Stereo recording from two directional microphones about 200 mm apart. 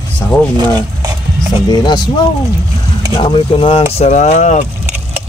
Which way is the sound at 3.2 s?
25° left (ahead or behind).